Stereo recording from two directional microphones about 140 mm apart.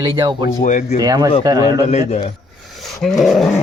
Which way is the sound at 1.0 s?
30° right (ahead or behind).